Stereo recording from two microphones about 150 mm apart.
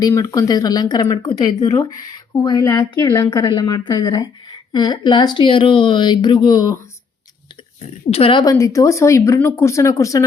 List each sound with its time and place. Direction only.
0.0 s speech: 25° left (ahead or behind)
8.1 s a woman's voice: 35° left (ahead or behind)
8.5 s speech: 20° left (ahead or behind)